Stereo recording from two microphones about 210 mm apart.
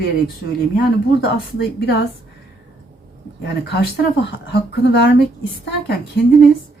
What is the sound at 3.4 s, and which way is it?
Speech, 50° left (ahead or behind).